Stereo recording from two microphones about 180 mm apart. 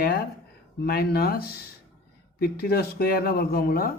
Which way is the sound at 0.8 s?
55° left (ahead or behind).